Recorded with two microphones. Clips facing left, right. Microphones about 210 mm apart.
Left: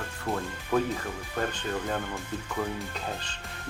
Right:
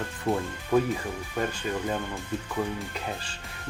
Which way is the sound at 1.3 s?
10° right (ahead or behind).